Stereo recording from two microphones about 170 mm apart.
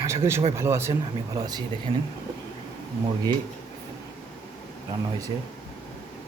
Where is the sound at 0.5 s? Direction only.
15° right (ahead or behind).